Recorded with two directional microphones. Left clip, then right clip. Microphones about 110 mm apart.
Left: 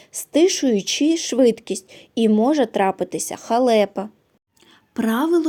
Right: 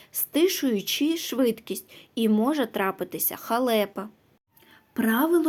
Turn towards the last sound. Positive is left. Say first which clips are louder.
# left 3 dB
turn(degrees=40)  # may be behind; listen again after turning